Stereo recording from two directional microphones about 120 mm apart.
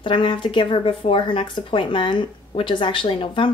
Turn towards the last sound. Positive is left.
turn(degrees=45)  # may be behind; listen again after turning